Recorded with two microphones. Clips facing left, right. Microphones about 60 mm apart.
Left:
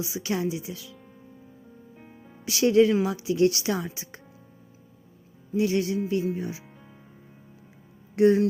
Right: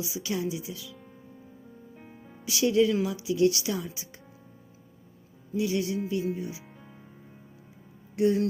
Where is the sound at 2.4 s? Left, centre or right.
Left.